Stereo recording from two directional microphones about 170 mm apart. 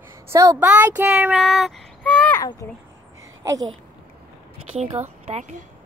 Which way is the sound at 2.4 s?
20° left (ahead or behind).